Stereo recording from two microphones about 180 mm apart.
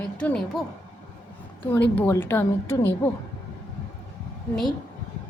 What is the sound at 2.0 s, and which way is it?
A woman's voice, 15° left (ahead or behind).